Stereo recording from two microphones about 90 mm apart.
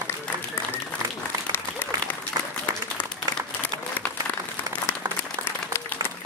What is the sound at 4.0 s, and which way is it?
Applause, 20° left (ahead or behind).